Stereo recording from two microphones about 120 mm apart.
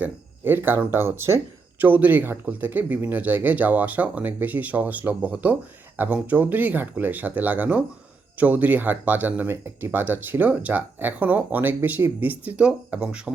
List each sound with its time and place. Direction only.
0.0 s speech: 15° right (ahead or behind)